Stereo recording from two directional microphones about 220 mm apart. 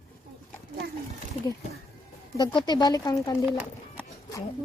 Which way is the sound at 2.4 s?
20° left (ahead or behind).